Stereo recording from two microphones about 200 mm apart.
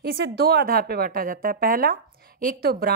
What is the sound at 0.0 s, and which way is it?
A woman's voice, 50° right (ahead or behind).